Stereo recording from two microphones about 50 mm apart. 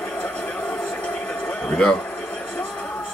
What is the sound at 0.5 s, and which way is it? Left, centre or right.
Train, left.